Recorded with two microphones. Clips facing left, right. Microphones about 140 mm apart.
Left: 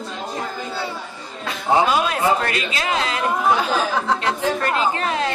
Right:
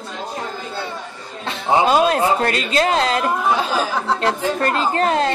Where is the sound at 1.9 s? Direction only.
35° right (ahead or behind).